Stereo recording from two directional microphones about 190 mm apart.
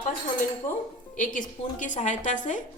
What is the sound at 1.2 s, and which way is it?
A woman's voice, 45° left (ahead or behind).